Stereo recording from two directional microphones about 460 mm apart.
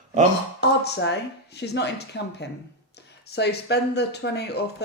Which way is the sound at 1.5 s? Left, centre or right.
Left.